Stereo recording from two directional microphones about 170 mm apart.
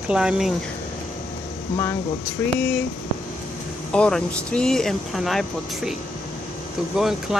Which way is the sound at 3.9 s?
5° left (ahead or behind).